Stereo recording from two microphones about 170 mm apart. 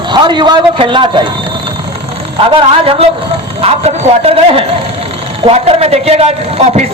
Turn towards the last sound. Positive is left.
turn(degrees=-40)  # may be behind; listen again after turning